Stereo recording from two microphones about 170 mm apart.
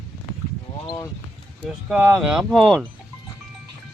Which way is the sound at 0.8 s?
20° left (ahead or behind).